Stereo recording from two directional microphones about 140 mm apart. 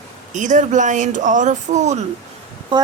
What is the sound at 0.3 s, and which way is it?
Speech, 60° right (ahead or behind).